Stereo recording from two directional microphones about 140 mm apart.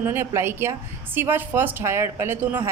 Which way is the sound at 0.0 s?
15° right (ahead or behind).